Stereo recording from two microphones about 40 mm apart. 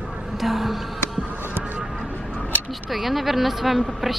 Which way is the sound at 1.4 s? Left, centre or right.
Right.